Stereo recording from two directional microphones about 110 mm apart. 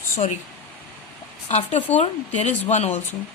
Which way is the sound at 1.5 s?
90° left.